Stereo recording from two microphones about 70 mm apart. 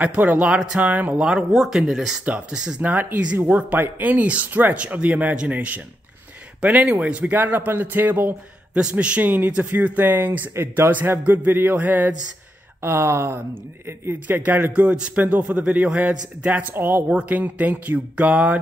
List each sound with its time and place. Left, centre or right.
0.0 s a man's voice: right
2.8 s a man's voice: right
12.8 s speech: right
14.2 s a man's voice: right
16.7 s speech: right
17.1 s a man's voice: centre